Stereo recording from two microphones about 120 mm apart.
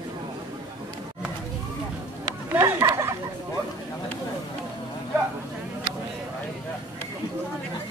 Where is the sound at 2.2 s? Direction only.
30° right (ahead or behind).